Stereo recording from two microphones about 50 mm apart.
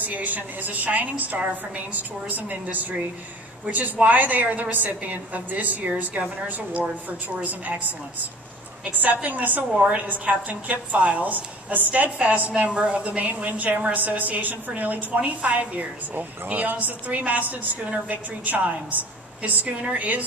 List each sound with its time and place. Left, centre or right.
0.0 s a woman's voice: right
8.8 s a woman's voice: right
9.8 s a woman's voice: right
10.0 s a woman's voice: right